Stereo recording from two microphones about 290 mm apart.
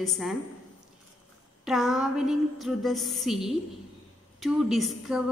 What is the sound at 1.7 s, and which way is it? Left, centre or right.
A woman's voice, centre.